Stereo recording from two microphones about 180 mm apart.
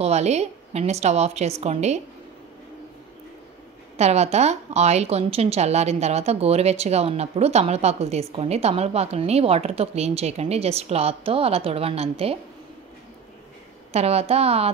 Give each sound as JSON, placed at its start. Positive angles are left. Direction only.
{"t": 0.0, "sound": "a woman's voice", "side_deg": -35}
{"t": 3.9, "sound": "a woman's voice", "side_deg": -35}
{"t": 13.9, "sound": "a woman's voice", "side_deg": -35}